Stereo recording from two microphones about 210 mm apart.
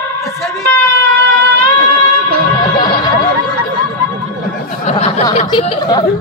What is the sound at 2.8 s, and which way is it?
Music, 20° left (ahead or behind).